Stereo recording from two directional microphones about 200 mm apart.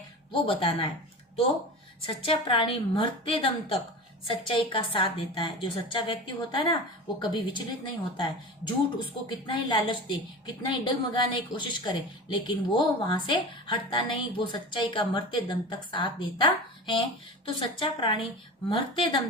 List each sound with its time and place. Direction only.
0.3 s a woman's voice: 25° left (ahead or behind)
2.0 s a woman's voice: 25° left (ahead or behind)